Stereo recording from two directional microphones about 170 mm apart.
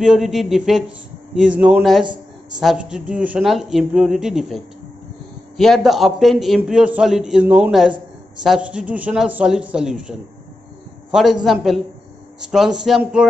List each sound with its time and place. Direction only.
0.0 s a man's voice: 5° right (ahead or behind)